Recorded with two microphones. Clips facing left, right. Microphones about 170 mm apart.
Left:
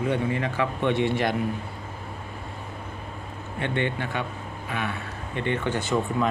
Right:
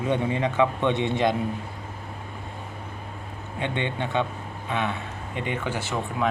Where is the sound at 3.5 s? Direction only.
20° right (ahead or behind).